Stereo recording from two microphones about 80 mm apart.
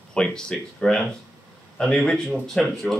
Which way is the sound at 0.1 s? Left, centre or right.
Centre.